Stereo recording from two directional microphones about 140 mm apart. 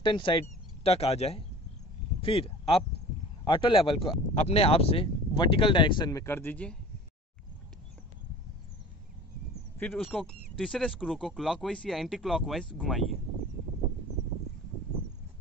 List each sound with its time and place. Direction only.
0.0 s speech: 35° left (ahead or behind)
0.8 s speech: 45° left (ahead or behind)
6.2 s a man's voice: 15° left (ahead or behind)
9.9 s speech: centre (ahead or behind)